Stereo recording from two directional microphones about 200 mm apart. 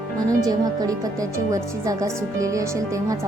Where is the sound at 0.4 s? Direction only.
20° right (ahead or behind).